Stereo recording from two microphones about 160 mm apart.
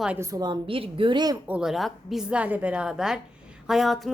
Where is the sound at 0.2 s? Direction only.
20° right (ahead or behind).